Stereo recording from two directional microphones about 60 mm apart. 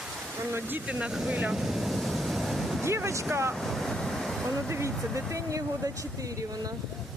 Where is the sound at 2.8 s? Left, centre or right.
Right.